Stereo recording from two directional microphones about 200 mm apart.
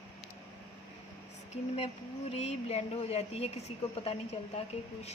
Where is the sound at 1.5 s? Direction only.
35° left (ahead or behind).